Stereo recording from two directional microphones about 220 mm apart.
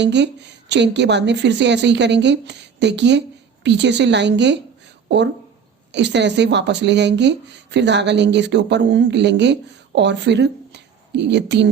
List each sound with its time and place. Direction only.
0.0 s speech: 50° right (ahead or behind)